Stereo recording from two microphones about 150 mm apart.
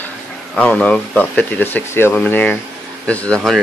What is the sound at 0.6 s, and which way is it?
Speech, 10° left (ahead or behind).